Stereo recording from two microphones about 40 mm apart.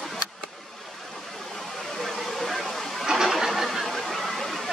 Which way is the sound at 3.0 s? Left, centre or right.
Centre.